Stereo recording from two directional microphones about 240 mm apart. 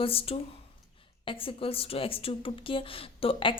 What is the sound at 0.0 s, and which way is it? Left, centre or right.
Speech, left.